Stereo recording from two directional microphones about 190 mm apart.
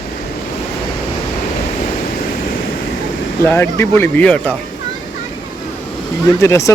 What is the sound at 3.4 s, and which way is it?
A man's voice, 10° left (ahead or behind).